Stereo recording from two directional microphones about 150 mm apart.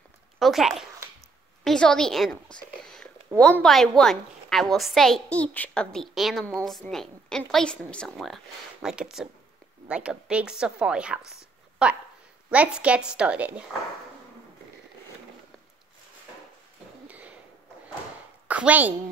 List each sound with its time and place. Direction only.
0.4 s a woman's voice: centre (ahead or behind)
3.3 s a woman's voice: 20° right (ahead or behind)
3.6 s a woman's voice: 5° left (ahead or behind)
17.1 s a sound: 10° right (ahead or behind)
18.5 s a woman's voice: 10° right (ahead or behind)